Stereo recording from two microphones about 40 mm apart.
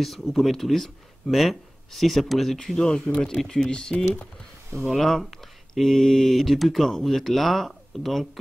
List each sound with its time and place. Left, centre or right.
0.0 s speech: centre
2.8 s speech: left
4.9 s speech: centre